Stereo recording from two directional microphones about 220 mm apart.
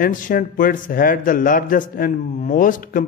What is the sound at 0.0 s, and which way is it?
Speech, 40° left (ahead or behind).